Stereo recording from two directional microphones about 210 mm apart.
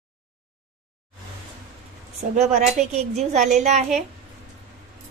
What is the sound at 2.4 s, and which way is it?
A woman's voice, 35° right (ahead or behind).